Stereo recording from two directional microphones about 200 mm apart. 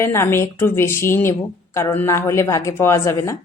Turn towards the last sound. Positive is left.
turn(degrees=15)  # may be behind; listen again after turning